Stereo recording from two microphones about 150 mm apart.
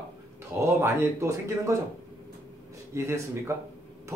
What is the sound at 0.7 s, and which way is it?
Speech, 15° right (ahead or behind).